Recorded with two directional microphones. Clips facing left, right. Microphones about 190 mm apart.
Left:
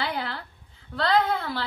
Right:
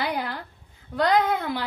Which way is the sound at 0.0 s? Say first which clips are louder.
Right 2 dB; 15° right (ahead or behind).